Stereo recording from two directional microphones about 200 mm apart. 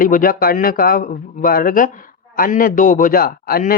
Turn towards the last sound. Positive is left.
turn(degrees=50)  # may be behind; listen again after turning